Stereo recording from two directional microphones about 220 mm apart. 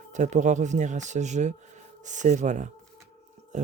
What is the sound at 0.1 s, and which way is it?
Speech, 35° right (ahead or behind).